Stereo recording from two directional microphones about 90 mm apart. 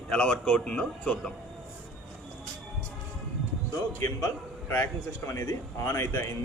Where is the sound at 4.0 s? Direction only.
30° left (ahead or behind).